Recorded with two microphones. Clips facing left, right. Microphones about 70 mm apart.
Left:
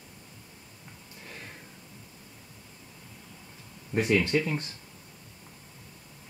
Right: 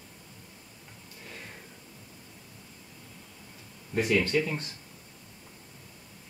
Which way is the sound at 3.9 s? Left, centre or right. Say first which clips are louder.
Left 1 dB; centre.